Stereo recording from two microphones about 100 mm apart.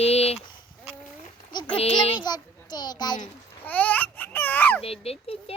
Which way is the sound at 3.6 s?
15° left (ahead or behind).